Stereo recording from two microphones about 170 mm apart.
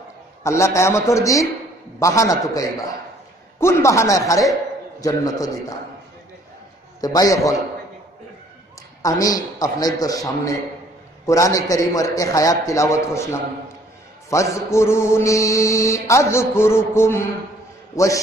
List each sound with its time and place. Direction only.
0.4 s mantra: 15° left (ahead or behind)
2.0 s a man's voice: 20° left (ahead or behind)
3.5 s mantra: 15° left (ahead or behind)
5.0 s a man's voice: 20° left (ahead or behind)
7.0 s a man's voice: 20° left (ahead or behind)
9.0 s a man's voice: 20° left (ahead or behind)
14.3 s mantra: 15° left (ahead or behind)
17.9 s a man's voice: 20° left (ahead or behind)